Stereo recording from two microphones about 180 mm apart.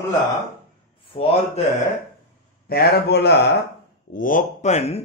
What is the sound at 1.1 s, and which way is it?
Speech, 30° left (ahead or behind).